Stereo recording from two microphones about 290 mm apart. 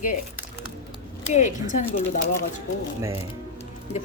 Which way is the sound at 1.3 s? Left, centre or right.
Left.